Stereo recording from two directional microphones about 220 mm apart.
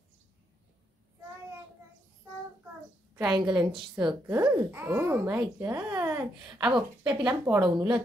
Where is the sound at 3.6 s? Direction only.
20° right (ahead or behind).